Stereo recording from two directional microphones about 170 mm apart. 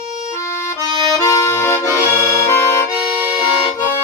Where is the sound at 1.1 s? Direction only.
20° left (ahead or behind).